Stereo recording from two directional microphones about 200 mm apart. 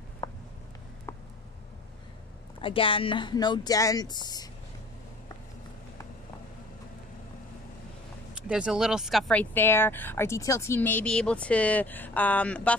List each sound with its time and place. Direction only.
0.2 s a sound: 15° left (ahead or behind)
2.6 s speech: 25° left (ahead or behind)
8.4 s speech: 5° right (ahead or behind)